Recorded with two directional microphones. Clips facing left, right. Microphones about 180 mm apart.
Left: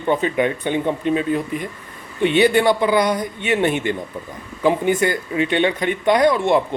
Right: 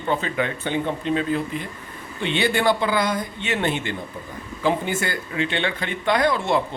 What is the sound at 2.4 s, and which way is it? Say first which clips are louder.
Speech: left 5 dB; 20° left (ahead or behind).